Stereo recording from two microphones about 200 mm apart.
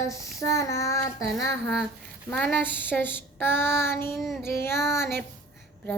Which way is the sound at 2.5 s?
10° left (ahead or behind).